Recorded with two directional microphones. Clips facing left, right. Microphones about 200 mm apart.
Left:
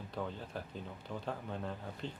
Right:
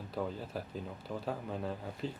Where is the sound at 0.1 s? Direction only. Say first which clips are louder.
Right 4 dB; 5° right (ahead or behind).